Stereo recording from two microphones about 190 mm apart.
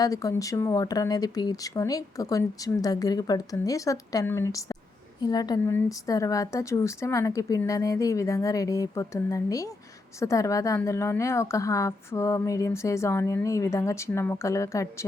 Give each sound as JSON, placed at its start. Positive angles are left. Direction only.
{"t": 0.0, "sound": "a woman's voice", "side_deg": 20}